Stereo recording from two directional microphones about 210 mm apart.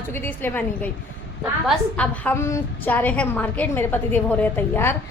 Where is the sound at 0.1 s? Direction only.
10° left (ahead or behind).